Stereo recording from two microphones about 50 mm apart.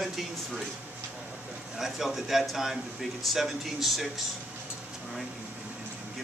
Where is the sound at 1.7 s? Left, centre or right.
Centre.